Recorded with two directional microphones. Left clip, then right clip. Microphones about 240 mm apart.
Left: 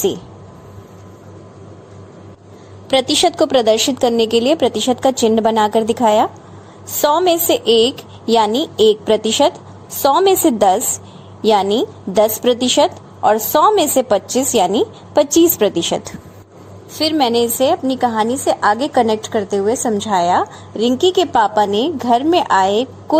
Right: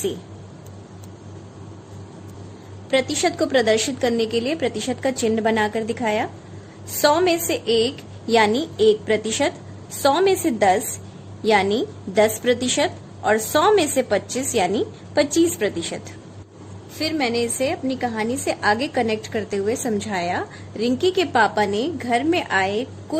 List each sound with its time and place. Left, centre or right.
2.9 s a woman's voice: left
22.2 s a woman's voice: centre
22.6 s a woman's voice: centre